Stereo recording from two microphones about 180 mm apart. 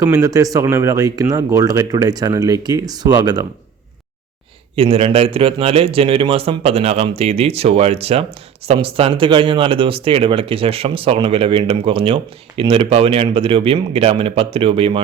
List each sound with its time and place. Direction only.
0.0 s speech: 15° right (ahead or behind)
4.7 s speech: 30° right (ahead or behind)